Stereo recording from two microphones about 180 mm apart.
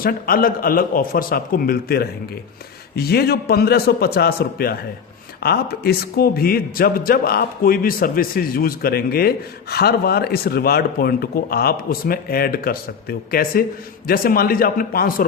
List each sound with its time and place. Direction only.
0.0 s a man's voice: 55° left (ahead or behind)